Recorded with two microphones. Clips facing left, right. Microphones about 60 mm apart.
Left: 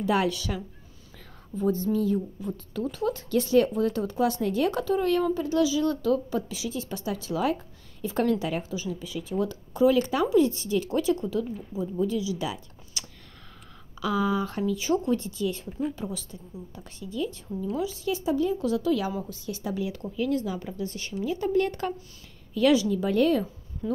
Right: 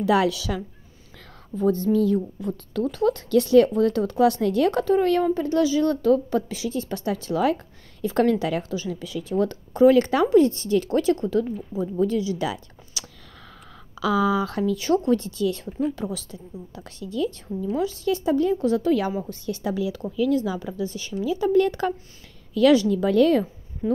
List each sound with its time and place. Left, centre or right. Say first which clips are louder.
0.0 s speech: right 5 dB; right
1.6 s a woman's voice: right 5 dB; right
13.0 s a sound: right 2 dB; right
14.3 s a woman's voice: right 4 dB; right
18.6 s a woman's voice: right 4 dB; right
19.7 s speech: right 3 dB; right
22.5 s speech: right 5 dB; right